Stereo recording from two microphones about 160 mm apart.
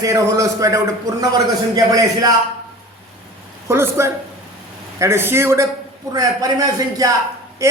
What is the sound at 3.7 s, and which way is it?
A man's voice, 15° right (ahead or behind).